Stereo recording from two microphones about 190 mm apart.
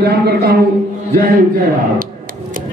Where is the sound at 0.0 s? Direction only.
55° right (ahead or behind).